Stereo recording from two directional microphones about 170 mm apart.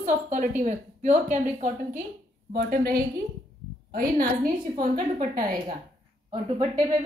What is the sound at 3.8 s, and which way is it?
A woman's voice, 55° right (ahead or behind).